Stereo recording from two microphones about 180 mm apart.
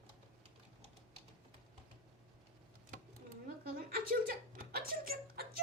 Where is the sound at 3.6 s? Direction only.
55° right (ahead or behind).